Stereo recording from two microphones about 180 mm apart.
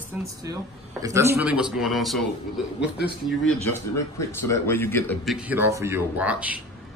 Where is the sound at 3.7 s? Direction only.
15° left (ahead or behind).